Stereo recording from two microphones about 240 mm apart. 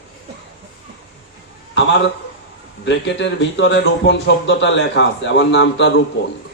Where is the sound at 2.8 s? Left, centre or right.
Left.